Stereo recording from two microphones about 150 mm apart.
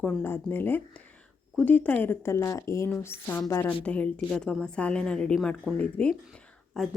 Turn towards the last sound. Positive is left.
turn(degrees=0)  # may be behind; listen again after turning